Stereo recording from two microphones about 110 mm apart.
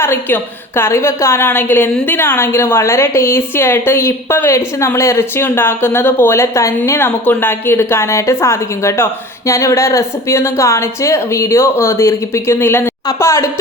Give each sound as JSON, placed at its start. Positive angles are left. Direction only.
{"t": 0.0, "sound": "a woman's voice", "side_deg": 20}